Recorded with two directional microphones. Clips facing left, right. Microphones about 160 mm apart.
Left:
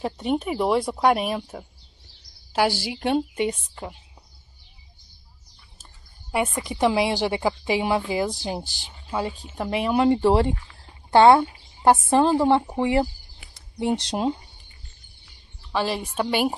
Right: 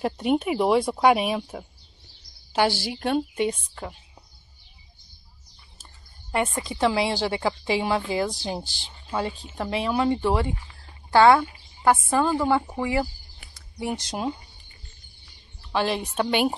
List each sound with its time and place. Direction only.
0.0 s a woman's voice: 5° right (ahead or behind)
6.3 s a woman's voice: 10° left (ahead or behind)
10.1 s speech: 35° left (ahead or behind)
11.1 s a woman's voice: 25° left (ahead or behind)
15.7 s speech: centre (ahead or behind)